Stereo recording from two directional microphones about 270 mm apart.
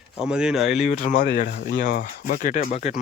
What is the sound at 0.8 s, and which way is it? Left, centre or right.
Speech, left.